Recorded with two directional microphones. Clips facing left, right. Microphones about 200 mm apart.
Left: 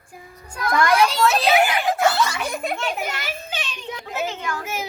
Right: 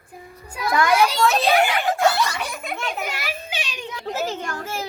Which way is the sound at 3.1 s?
10° right (ahead or behind).